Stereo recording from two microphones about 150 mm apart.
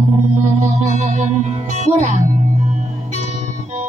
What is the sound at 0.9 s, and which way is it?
Music, 50° right (ahead or behind).